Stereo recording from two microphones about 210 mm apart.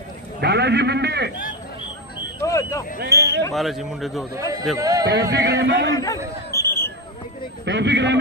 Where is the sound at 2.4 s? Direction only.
15° left (ahead or behind).